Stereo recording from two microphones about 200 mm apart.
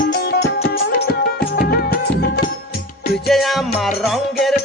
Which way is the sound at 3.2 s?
Centre (ahead or behind).